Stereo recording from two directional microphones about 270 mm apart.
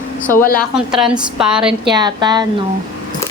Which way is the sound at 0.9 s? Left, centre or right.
Centre.